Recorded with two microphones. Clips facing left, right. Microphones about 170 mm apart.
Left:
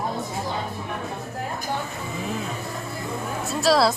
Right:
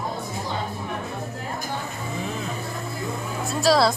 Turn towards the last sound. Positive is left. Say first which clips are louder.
# even
turn(degrees=0)  # may be behind; listen again after turning